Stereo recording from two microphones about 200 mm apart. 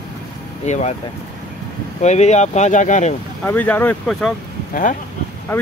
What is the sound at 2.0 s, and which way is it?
Speech, 35° left (ahead or behind).